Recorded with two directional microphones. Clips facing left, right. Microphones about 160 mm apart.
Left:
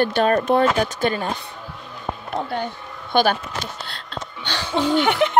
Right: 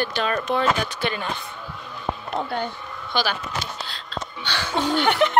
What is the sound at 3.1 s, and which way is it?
Speech, 55° left (ahead or behind).